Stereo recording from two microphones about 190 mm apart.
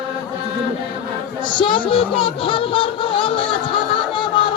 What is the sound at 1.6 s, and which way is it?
Speech, 25° left (ahead or behind).